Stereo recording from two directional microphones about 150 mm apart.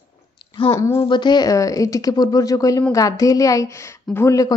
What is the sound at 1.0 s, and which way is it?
A woman's voice, 30° left (ahead or behind).